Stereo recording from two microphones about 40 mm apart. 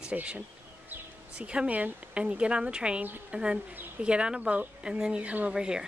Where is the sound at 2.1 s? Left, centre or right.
Right.